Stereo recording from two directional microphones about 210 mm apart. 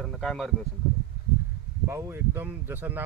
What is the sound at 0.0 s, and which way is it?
Speech, centre (ahead or behind).